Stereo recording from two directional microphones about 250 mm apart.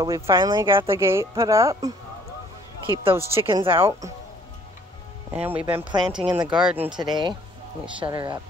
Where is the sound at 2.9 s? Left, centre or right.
Right.